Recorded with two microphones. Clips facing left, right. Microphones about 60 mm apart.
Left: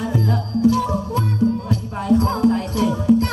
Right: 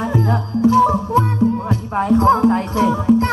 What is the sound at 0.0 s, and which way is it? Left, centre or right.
Music, right.